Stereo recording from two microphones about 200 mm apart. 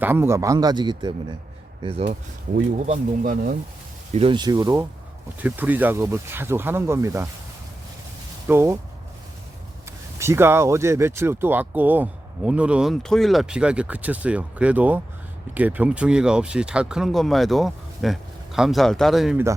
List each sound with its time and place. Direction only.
0.0 s speech: 10° right (ahead or behind); by 3.6 s 45° right (ahead or behind)
4.1 s speech: 25° right (ahead or behind)
8.4 s speech: 10° right (ahead or behind)
10.2 s speech: 15° right (ahead or behind)